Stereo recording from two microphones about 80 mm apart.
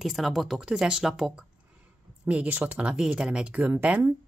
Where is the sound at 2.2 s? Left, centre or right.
Centre.